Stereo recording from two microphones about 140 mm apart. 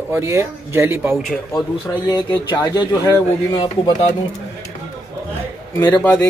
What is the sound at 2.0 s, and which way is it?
Speech, 30° left (ahead or behind).